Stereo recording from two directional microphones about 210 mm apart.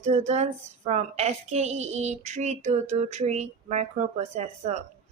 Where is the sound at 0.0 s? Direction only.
30° right (ahead or behind).